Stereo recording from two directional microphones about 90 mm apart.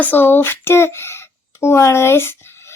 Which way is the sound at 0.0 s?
20° left (ahead or behind).